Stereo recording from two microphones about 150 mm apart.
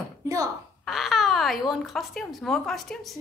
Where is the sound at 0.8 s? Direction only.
Centre (ahead or behind).